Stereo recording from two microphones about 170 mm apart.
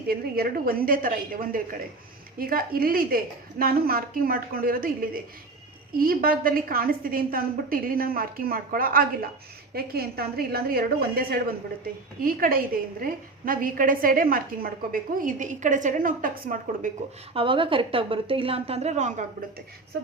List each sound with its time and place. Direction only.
0.1 s a woman's voice: 60° right (ahead or behind)
17.3 s a woman's voice: 30° right (ahead or behind)